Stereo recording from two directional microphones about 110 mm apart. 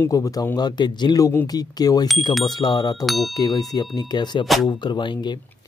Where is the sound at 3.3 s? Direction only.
35° left (ahead or behind).